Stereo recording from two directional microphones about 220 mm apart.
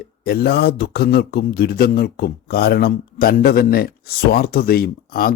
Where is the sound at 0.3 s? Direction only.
45° left (ahead or behind).